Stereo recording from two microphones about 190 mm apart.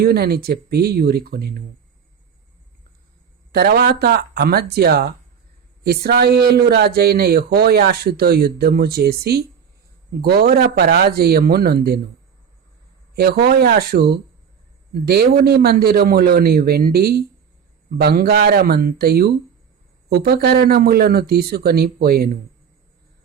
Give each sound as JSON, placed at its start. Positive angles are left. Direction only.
{"t": 0.0, "sound": "a man's voice", "side_deg": -55}
{"t": 3.5, "sound": "a man's voice", "side_deg": -55}
{"t": 13.1, "sound": "a man's voice", "side_deg": -55}